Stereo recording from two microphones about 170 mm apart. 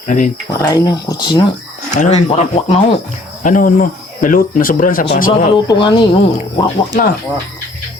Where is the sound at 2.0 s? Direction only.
40° left (ahead or behind).